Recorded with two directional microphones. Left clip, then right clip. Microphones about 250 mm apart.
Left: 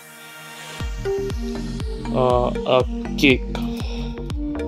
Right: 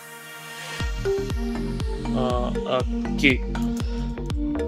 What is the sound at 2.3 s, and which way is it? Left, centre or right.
Speech, centre.